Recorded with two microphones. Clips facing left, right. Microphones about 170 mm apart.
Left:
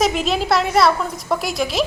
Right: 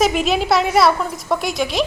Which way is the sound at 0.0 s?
Centre (ahead or behind).